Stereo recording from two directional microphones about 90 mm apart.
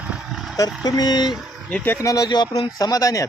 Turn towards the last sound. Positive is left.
turn(degrees=40)  # may be behind; listen again after turning